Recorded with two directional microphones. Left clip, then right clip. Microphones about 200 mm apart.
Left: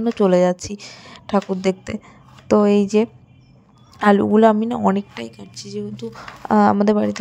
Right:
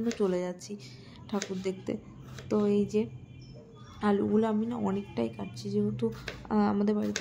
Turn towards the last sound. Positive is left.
turn(degrees=35)  # may be behind; listen again after turning